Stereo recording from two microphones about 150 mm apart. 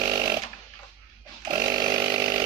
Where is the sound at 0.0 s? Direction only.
25° right (ahead or behind).